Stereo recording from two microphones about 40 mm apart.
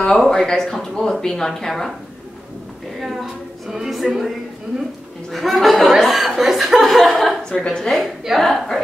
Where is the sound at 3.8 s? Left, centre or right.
Centre.